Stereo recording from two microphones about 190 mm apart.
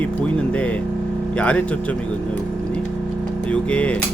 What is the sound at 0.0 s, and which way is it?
Speech, 5° left (ahead or behind).